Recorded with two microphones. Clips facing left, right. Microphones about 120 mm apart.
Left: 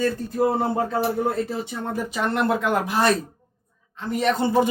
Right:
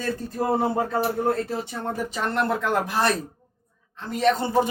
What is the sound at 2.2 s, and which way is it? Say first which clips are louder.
Speech: left 3 dB; 15° left (ahead or behind).